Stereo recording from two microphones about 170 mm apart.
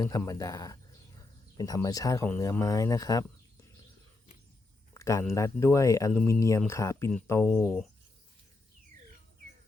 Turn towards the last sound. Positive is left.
turn(degrees=5)  # may be behind; listen again after turning